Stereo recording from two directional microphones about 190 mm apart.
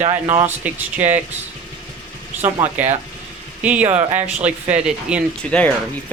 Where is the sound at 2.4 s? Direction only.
35° right (ahead or behind).